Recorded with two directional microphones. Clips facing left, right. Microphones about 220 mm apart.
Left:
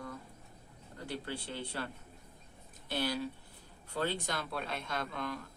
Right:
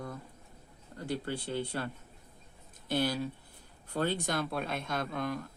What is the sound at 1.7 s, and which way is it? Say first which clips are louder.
Speech: right 4 dB; 50° right (ahead or behind).